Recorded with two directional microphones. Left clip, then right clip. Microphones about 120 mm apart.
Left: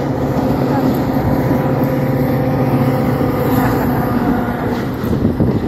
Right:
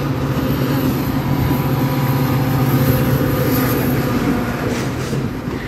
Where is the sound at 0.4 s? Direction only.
50° right (ahead or behind); by 3.8 s 30° right (ahead or behind).